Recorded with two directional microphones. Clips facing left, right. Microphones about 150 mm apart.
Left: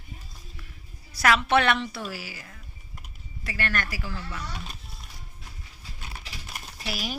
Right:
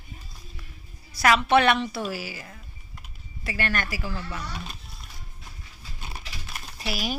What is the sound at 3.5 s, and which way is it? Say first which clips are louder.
Speech: right 2 dB; 15° right (ahead or behind).